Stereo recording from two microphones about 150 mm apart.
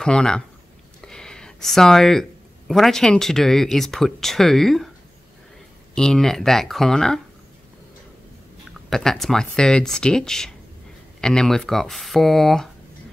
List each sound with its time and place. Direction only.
0.0 s speech: 5° left (ahead or behind)
1.0 s a sound: 5° left (ahead or behind)
2.7 s speech: centre (ahead or behind)
5.9 s speech: 5° left (ahead or behind)
8.9 s speech: 5° left (ahead or behind)